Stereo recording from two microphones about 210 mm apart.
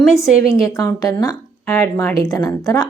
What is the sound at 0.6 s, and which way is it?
Speech, 15° left (ahead or behind).